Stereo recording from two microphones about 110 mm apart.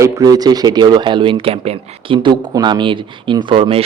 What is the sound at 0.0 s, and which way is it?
Speech, 35° right (ahead or behind).